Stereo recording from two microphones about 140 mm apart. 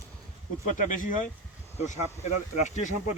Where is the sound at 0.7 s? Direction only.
65° left (ahead or behind).